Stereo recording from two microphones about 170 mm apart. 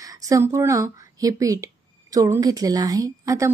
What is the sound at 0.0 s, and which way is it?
Speech, 20° right (ahead or behind).